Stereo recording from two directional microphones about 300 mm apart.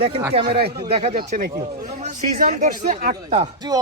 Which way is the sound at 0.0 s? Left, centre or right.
Centre.